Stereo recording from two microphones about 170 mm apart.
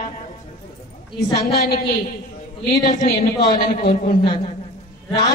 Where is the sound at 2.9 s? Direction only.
45° left (ahead or behind).